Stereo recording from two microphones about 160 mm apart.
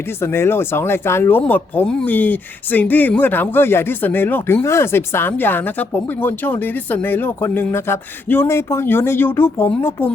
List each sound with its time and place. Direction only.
0.2 s speech: 15° left (ahead or behind)